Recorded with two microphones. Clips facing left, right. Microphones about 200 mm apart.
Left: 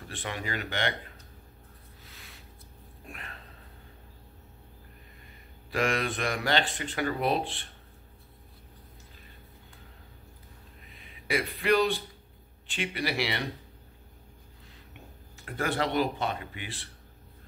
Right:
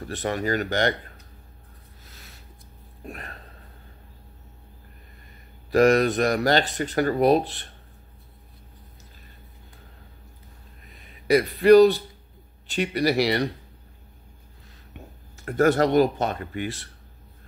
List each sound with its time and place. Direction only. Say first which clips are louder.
0.1 s speech: right 10 dB; 40° right (ahead or behind)
2.0 s a sound: right 2 dB; 40° right (ahead or behind)
5.7 s speech: right 11 dB; 40° right (ahead or behind)
11.0 s speech: right 10 dB; 40° right (ahead or behind)
15.3 s speech: right 11 dB; 45° right (ahead or behind)